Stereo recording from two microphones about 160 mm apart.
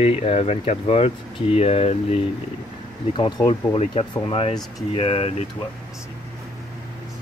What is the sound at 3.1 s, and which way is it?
Speech, 30° left (ahead or behind).